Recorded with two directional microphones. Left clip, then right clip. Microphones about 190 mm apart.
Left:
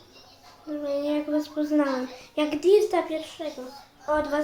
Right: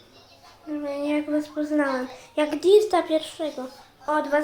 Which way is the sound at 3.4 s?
25° right (ahead or behind).